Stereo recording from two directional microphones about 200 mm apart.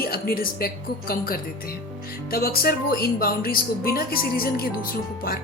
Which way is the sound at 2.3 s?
50° left (ahead or behind).